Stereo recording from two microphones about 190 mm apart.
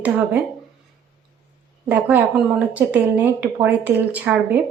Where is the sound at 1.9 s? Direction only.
10° right (ahead or behind).